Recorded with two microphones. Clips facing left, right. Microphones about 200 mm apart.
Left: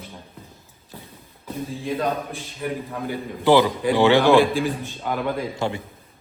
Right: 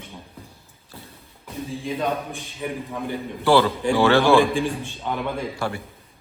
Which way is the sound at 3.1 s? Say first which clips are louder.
Left 1 dB; 15° left (ahead or behind).